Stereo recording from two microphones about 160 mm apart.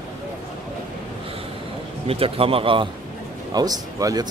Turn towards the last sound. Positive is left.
turn(degrees=-25)  # may be behind; listen again after turning